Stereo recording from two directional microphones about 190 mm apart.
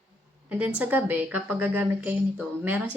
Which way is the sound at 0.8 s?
10° right (ahead or behind).